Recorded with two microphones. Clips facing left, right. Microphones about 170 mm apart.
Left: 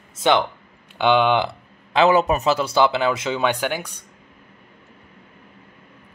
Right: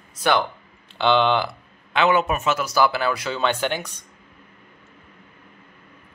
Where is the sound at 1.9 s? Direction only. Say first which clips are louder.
Left 3 dB; 35° left (ahead or behind); by 4.0 s 10° left (ahead or behind).